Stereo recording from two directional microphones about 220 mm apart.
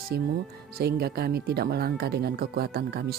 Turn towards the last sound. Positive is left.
turn(degrees=-45)  # may be behind; listen again after turning